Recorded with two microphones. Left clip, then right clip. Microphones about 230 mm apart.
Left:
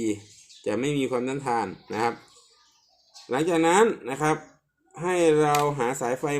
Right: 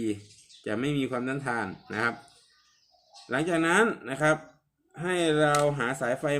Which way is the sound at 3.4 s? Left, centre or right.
Right.